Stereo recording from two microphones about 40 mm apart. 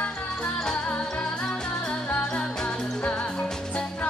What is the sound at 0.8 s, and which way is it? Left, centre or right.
Music, left.